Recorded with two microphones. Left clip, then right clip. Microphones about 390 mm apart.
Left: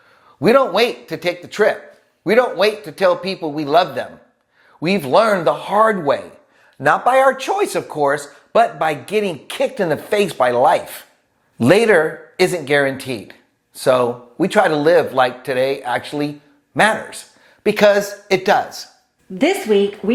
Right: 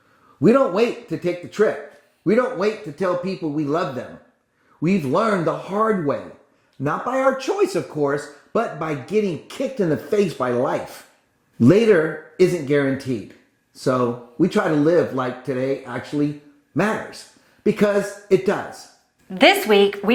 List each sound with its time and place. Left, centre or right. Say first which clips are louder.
0.4 s a man's voice: left 3 dB; left
6.8 s a man's voice: left 9 dB; left
7.4 s speech: left 2 dB; left
8.5 s a man's voice: left 8 dB; left
19.3 s a woman's voice: right 2 dB; right